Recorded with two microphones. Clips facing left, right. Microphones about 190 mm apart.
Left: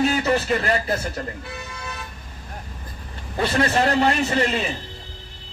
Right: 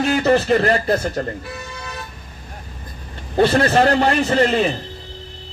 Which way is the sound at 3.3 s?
35° right (ahead or behind).